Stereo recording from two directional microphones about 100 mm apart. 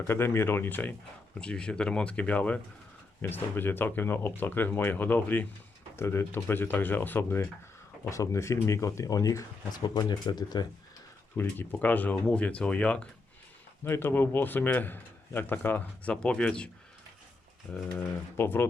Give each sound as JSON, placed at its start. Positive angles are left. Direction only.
{"t": 0.1, "sound": "speech", "side_deg": 25}
{"t": 11.3, "sound": "speech", "side_deg": 20}
{"t": 13.8, "sound": "speech", "side_deg": 25}
{"t": 18.3, "sound": "speech", "side_deg": 25}